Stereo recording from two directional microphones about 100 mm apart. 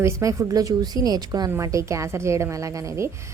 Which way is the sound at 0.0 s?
30° right (ahead or behind).